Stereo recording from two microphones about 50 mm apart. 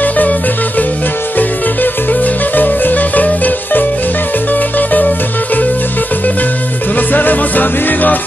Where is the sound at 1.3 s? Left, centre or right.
Left.